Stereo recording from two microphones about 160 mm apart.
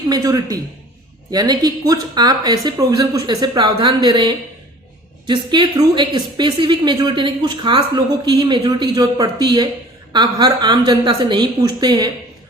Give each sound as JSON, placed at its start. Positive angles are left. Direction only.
{"t": 0.1, "sound": "a woman's voice", "side_deg": -20}